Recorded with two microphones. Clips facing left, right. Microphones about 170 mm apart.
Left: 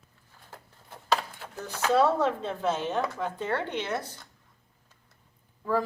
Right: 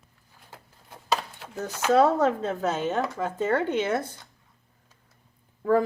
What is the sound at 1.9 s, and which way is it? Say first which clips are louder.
A woman's voice: right 3 dB; 45° right (ahead or behind).